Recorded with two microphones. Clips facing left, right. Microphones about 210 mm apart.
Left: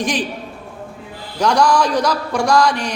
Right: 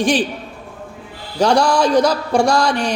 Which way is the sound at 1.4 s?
30° right (ahead or behind).